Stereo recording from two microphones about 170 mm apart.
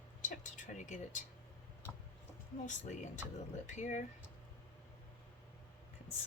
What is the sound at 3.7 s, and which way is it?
Speech, 45° left (ahead or behind).